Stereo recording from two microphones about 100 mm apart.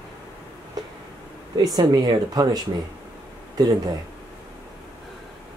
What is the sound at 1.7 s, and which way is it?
Speech, 45° right (ahead or behind).